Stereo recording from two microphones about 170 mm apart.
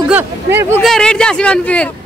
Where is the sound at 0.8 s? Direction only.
Centre (ahead or behind).